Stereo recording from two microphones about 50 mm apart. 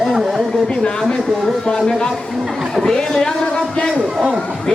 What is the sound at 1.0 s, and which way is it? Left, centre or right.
Speech, centre.